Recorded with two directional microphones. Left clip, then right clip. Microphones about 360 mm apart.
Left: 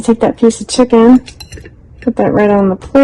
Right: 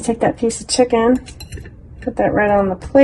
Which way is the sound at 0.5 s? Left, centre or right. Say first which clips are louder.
Left 5 dB; left.